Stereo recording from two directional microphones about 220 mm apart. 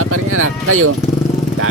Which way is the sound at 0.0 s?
75° right (ahead or behind).